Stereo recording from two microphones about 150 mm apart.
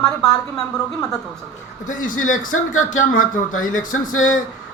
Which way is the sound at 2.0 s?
60° left (ahead or behind).